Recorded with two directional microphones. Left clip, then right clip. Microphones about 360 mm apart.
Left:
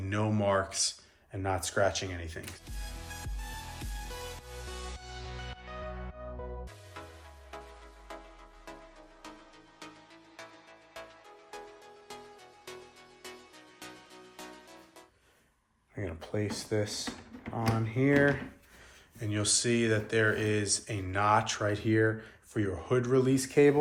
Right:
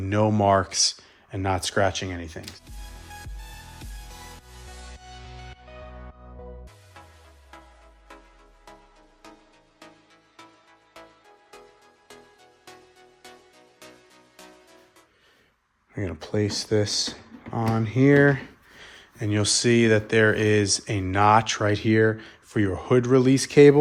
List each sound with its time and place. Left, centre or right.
0.0 s speech: centre
2.4 s music: centre
16.0 s speech: right